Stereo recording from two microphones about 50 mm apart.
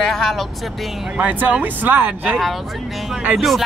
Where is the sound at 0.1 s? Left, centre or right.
Centre.